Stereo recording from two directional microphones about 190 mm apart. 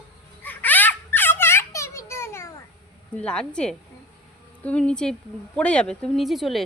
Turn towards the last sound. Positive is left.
turn(degrees=0)  # may be behind; listen again after turning